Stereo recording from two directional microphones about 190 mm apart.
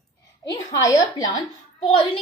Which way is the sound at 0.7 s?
20° left (ahead or behind).